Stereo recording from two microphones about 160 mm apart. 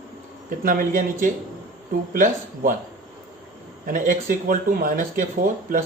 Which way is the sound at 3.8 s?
55° right (ahead or behind).